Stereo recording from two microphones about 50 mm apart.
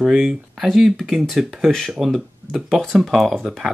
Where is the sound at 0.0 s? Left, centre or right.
Centre.